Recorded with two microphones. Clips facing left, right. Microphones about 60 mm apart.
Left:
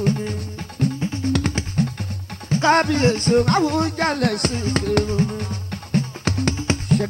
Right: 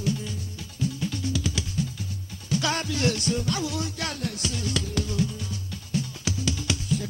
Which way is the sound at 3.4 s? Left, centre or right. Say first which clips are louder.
Left 11 dB; left.